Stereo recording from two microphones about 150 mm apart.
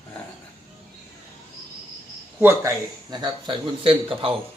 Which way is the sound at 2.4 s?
15° right (ahead or behind).